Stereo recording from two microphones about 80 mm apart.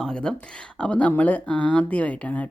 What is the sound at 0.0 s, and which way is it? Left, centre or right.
Speech, centre.